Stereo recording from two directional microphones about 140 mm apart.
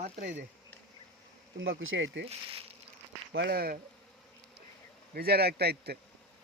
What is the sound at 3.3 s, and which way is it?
Speech, 90° right.